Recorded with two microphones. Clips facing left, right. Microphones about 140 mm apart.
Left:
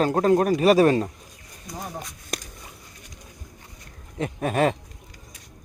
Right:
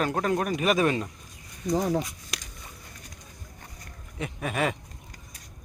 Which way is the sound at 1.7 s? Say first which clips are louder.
Right 10 dB; 90° right.